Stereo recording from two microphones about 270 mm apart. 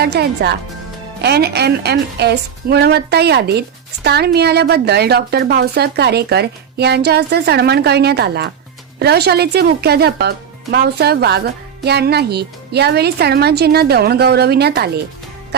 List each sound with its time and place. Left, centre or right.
0.0 s speech: right